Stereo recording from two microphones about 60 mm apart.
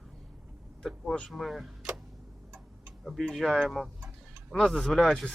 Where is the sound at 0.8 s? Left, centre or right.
Centre.